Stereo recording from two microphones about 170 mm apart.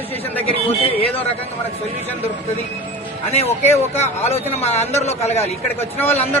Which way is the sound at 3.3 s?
40° left (ahead or behind).